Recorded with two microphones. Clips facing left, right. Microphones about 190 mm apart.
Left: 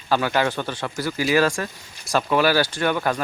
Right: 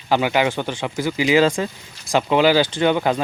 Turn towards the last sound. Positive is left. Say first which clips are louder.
# right 4 dB
turn(degrees=-20)  # may be behind; listen again after turning